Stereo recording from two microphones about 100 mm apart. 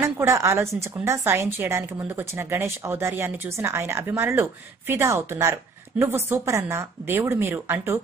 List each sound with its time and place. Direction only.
0.0 s a woman's voice: 25° right (ahead or behind)